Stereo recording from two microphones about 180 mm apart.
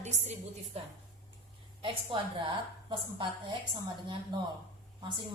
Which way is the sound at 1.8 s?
25° right (ahead or behind).